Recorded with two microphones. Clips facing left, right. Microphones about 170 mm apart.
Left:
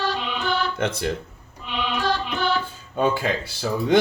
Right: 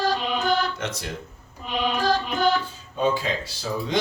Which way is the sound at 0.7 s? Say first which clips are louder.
Left 6 dB; 55° left (ahead or behind).